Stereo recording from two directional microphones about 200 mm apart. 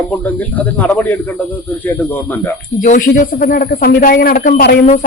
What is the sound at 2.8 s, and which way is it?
A man's voice, 40° left (ahead or behind).